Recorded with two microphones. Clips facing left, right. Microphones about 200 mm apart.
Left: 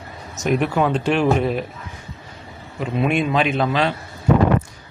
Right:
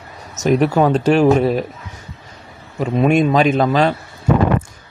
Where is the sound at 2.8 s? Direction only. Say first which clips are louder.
Right 6 dB; 40° right (ahead or behind).